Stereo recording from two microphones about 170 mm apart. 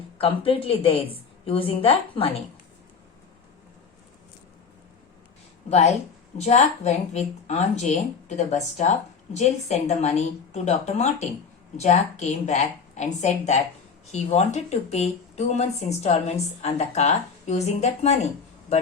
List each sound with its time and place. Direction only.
0.2 s speech: 35° left (ahead or behind)
6.3 s speech: 40° left (ahead or behind)